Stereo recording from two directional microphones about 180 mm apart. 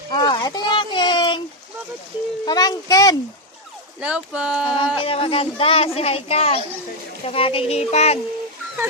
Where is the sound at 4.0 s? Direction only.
5° right (ahead or behind).